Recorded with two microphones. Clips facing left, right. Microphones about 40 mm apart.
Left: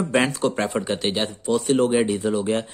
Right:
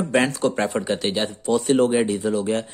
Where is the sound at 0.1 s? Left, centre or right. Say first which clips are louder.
Right 2 dB; centre.